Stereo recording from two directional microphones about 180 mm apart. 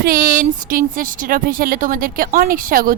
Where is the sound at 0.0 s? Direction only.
50° right (ahead or behind).